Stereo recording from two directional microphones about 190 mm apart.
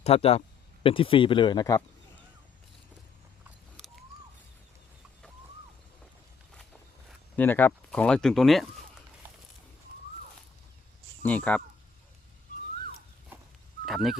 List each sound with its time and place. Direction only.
0.0 s speech: 30° left (ahead or behind)
7.3 s speech: 10° left (ahead or behind)
11.2 s speech: 10° left (ahead or behind)
13.8 s speech: centre (ahead or behind)